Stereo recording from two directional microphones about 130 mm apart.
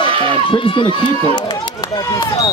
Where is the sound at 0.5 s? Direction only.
40° left (ahead or behind).